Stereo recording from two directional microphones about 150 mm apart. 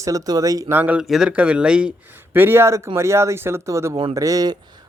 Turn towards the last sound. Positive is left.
turn(degrees=-25)  # may be behind; listen again after turning